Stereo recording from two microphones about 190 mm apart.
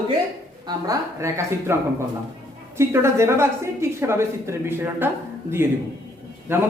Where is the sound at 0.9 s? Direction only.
15° right (ahead or behind).